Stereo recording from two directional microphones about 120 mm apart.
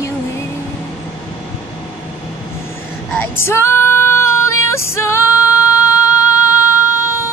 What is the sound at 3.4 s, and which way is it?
Female singing, 20° left (ahead or behind).